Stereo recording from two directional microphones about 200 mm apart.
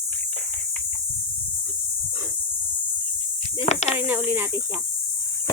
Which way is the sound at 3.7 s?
35° left (ahead or behind).